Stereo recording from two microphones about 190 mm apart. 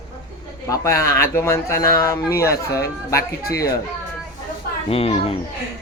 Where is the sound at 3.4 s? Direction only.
55° left (ahead or behind).